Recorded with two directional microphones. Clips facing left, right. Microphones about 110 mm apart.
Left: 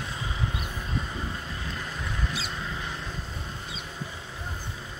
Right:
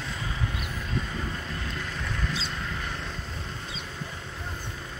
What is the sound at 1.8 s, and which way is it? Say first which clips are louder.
Mouse: right 1 dB; 10° left (ahead or behind).